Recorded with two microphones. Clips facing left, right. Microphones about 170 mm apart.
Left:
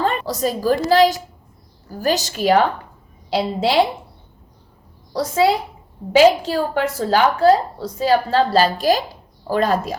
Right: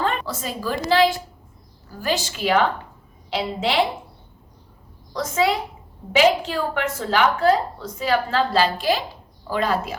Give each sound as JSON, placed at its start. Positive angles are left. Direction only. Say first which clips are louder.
{"t": 0.0, "sound": "a woman's voice", "louder": "left 5 dB", "side_deg": 40}
{"t": 5.1, "sound": "a woman's voice", "louder": "left 4 dB", "side_deg": 35}